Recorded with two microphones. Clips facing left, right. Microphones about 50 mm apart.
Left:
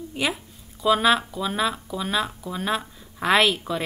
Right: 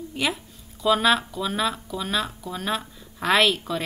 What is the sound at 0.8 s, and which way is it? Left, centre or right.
Speech, centre.